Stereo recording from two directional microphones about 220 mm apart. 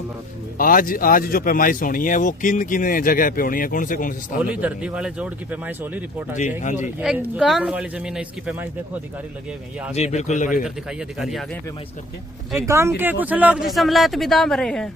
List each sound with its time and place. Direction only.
0.6 s speech: 40° left (ahead or behind)
4.5 s speech: 5° right (ahead or behind)
9.9 s speech: 30° left (ahead or behind)
11.2 s speech: centre (ahead or behind)
12.5 s speech: 10° right (ahead or behind); by 14.8 s 5° left (ahead or behind)